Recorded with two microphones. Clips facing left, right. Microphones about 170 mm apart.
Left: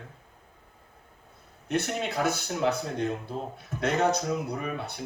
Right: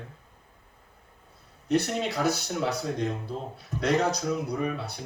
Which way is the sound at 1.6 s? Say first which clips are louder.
Right 3 dB; 35° right (ahead or behind).